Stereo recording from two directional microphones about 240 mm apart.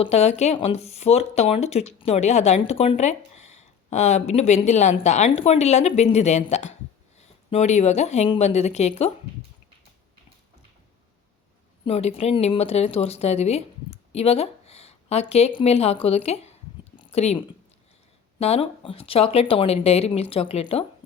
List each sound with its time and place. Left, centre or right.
0.0 s speech: left
11.9 s speech: left
17.0 s a sound: left
18.3 s speech: left